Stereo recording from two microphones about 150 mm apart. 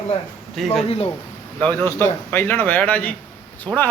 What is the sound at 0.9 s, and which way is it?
Speech, 40° left (ahead or behind).